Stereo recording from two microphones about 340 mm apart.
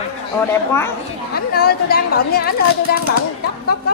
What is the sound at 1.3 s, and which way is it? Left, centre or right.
A woman's voice, left.